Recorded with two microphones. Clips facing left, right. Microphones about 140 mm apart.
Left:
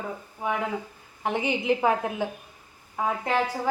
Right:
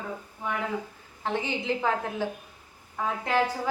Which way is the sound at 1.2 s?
15° left (ahead or behind).